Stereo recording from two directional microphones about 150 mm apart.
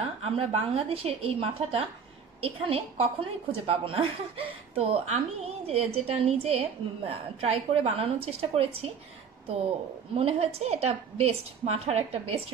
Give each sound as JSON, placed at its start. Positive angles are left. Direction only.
{"t": 0.2, "sound": "a woman's voice", "side_deg": -40}
{"t": 10.1, "sound": "a woman's voice", "side_deg": -40}